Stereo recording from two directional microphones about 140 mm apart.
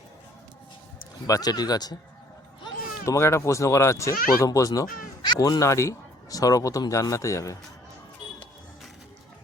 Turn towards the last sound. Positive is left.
turn(degrees=20)  # may be behind; listen again after turning